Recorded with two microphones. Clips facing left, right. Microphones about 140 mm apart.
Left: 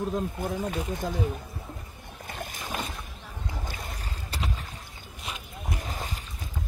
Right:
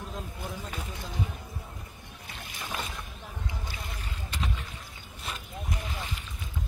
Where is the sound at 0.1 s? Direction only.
50° left (ahead or behind).